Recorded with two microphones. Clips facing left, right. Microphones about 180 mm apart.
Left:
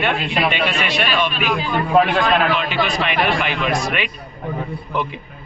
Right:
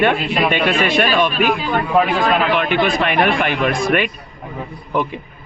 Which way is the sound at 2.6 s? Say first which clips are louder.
Right 4 dB; 55° right (ahead or behind).